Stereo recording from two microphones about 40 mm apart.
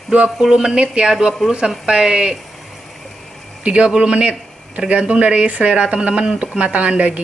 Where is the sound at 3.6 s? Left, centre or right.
Right.